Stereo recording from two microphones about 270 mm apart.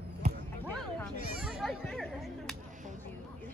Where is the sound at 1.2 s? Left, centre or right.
Right.